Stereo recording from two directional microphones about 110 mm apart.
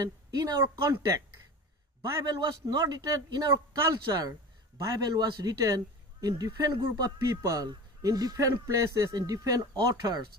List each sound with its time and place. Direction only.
0.0 s a woman's voice: 30° right (ahead or behind)
2.0 s a man's voice: 35° right (ahead or behind)